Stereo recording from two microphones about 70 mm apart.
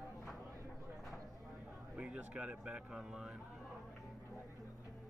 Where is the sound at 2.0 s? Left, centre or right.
Centre.